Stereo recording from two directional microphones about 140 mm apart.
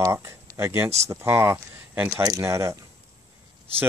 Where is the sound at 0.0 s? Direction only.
20° right (ahead or behind).